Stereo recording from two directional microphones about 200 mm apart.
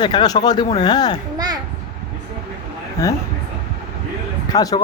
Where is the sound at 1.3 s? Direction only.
20° right (ahead or behind).